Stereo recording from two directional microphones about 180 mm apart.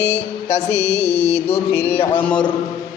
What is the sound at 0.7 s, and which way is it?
Speech, 15° left (ahead or behind).